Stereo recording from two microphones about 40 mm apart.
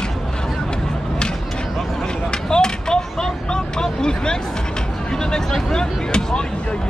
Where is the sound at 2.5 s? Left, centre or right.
Centre.